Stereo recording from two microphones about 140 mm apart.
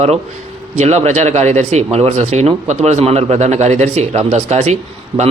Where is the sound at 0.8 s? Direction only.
55° right (ahead or behind).